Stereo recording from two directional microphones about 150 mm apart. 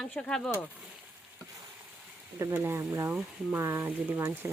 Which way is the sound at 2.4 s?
15° right (ahead or behind).